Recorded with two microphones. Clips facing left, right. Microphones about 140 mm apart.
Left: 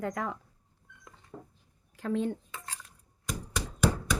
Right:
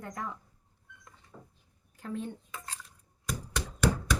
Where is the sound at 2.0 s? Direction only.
90° left.